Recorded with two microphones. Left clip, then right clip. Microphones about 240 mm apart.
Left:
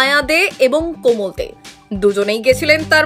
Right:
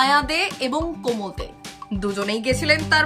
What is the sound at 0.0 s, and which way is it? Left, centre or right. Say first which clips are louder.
Speech: left 5 dB; centre.